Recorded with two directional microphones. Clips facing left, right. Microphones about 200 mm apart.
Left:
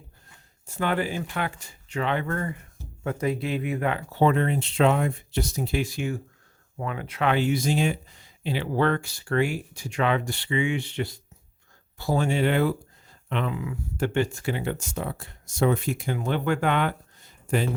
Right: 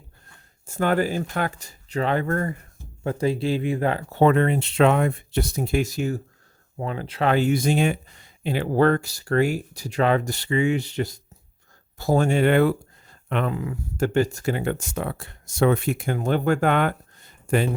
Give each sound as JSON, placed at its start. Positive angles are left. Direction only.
{"t": 0.7, "sound": "speech", "side_deg": -45}
{"t": 3.0, "sound": "speech", "side_deg": -30}
{"t": 4.1, "sound": "speech", "side_deg": -60}